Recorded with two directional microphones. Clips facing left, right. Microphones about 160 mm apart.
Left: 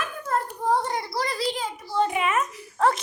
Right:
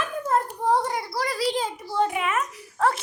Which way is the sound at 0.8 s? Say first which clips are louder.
Even; 5° right (ahead or behind).